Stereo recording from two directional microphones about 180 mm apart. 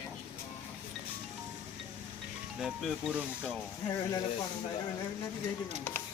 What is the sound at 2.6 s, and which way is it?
Speech, centre (ahead or behind).